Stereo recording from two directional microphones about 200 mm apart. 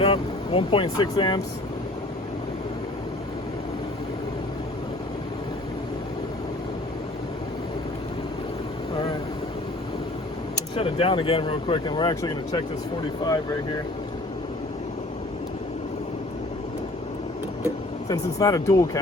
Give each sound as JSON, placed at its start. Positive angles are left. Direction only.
{"t": 0.0, "sound": "speech", "side_deg": 30}
{"t": 10.8, "sound": "speech", "side_deg": 30}
{"t": 18.1, "sound": "speech", "side_deg": 15}